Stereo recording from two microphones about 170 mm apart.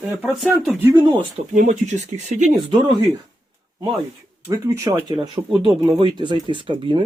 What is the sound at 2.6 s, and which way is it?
Speech, 30° right (ahead or behind).